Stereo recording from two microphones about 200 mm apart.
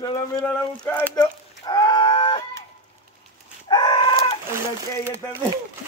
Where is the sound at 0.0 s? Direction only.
20° left (ahead or behind).